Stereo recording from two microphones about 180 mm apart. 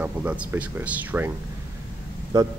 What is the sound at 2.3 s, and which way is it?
Speech, 20° right (ahead or behind).